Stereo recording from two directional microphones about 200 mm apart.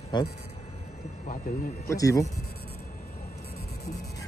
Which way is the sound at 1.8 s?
15° left (ahead or behind).